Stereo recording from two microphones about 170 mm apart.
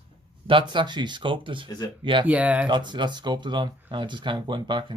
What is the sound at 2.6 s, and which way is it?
Speech, 25° right (ahead or behind).